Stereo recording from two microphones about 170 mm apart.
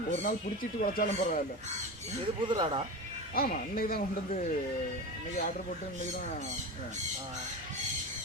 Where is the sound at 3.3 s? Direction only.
60° left (ahead or behind).